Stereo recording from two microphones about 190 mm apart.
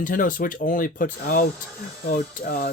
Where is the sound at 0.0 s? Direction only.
45° left (ahead or behind).